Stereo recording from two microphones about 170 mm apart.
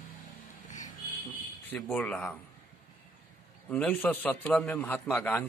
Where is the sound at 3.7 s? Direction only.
5° left (ahead or behind).